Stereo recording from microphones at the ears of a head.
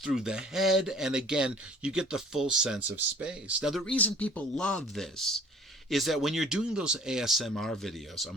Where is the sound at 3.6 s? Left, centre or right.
Centre.